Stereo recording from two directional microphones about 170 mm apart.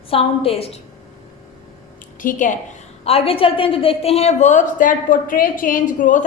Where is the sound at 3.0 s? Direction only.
35° left (ahead or behind).